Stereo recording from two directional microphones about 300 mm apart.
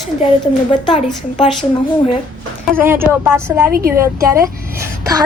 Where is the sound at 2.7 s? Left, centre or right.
Centre.